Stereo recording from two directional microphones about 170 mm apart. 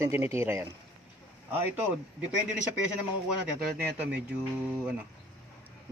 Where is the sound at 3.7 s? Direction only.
10° right (ahead or behind).